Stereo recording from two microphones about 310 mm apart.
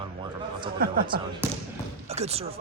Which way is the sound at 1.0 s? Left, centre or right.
Centre.